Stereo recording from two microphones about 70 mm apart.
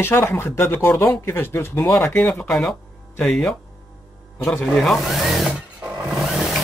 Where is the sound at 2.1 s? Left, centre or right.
Centre.